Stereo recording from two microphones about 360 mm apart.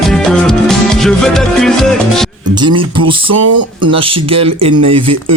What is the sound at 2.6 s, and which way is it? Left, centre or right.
Speech, centre.